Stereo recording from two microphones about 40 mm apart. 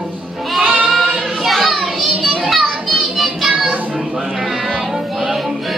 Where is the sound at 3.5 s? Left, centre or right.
Right.